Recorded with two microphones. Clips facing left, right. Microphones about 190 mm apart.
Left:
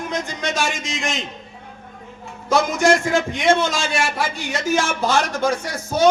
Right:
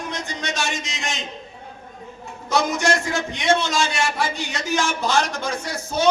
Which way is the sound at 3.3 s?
50° left (ahead or behind).